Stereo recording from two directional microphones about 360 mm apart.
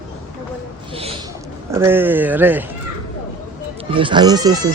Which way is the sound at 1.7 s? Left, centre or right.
Centre.